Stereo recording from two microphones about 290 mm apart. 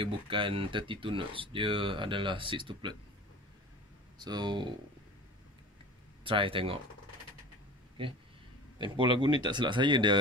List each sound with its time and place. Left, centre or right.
0.0 s speech: centre
4.2 s speech: centre
6.2 s speech: centre
8.0 s speech: centre